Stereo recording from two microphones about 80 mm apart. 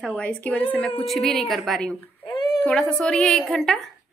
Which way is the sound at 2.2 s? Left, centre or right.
Left.